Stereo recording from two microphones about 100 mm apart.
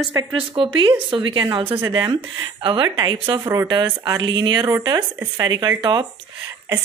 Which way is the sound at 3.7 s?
45° right (ahead or behind).